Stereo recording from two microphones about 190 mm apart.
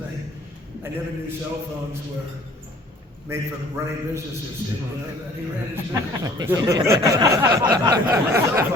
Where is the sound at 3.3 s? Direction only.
15° right (ahead or behind).